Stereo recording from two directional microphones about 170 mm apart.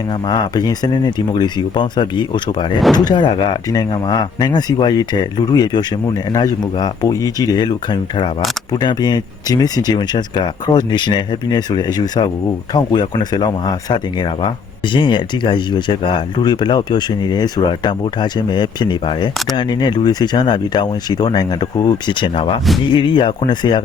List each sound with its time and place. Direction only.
0.1 s speech: 25° left (ahead or behind)